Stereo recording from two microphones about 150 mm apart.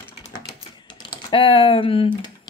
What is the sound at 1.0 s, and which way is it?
Speech, 35° left (ahead or behind).